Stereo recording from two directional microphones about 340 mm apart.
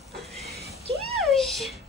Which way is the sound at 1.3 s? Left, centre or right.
Centre.